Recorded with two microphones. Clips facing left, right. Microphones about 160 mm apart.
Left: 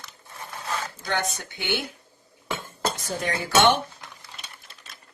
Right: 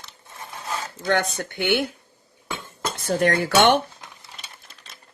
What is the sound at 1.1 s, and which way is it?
Speech, 60° right (ahead or behind).